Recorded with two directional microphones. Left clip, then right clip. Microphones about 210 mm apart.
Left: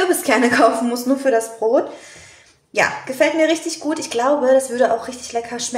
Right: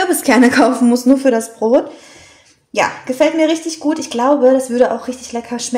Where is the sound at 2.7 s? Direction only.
30° right (ahead or behind).